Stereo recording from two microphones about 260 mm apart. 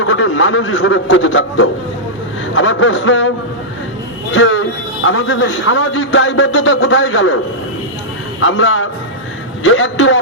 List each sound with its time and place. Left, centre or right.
0.1 s a man's voice: left
8.4 s a man's voice: left